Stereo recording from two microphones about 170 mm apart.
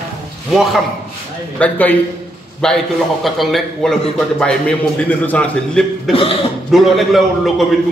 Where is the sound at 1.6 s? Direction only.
10° left (ahead or behind).